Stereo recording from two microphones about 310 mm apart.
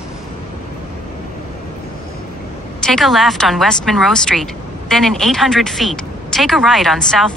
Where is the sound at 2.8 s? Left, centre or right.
Centre.